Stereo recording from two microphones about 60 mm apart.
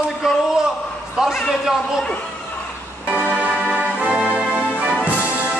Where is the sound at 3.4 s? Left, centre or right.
Right.